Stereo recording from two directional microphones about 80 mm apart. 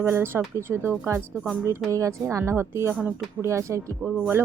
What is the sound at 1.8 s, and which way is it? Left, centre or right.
A woman's voice, right.